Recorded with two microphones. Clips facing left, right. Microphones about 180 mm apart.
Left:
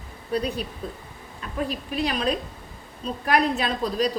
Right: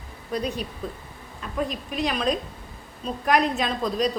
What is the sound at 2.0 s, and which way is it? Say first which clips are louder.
Speech: even; 35° left (ahead or behind).